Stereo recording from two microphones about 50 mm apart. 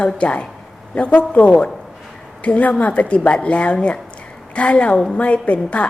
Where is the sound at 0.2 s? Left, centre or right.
Left.